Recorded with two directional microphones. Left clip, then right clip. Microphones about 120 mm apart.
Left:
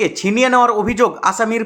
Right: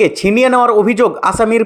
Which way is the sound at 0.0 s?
45° right (ahead or behind).